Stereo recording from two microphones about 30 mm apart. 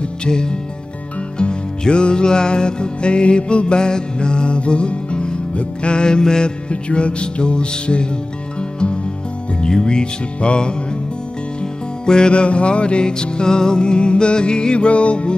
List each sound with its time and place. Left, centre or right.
0.2 s speech: left
1.4 s music: left
6.7 s music: left
12.1 s music: left